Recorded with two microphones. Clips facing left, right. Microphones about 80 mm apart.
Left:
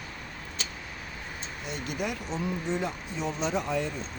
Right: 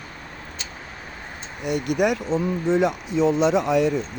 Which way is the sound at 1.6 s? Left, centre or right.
Right.